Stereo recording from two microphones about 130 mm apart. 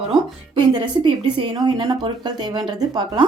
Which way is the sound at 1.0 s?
35° right (ahead or behind).